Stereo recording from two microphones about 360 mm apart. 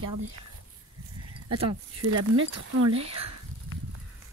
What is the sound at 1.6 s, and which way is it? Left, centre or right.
Speech, right.